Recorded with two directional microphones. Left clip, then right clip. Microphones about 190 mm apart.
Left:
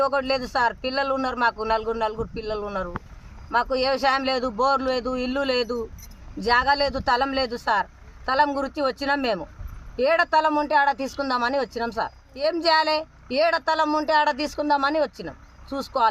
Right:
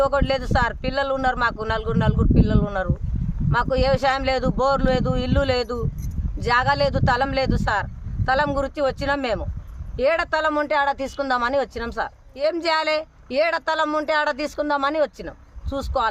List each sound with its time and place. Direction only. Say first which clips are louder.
0.0 s speech: right 2 dB; 25° right (ahead or behind)